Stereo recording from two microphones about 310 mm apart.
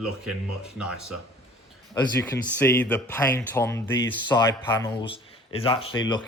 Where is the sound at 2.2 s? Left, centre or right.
Centre.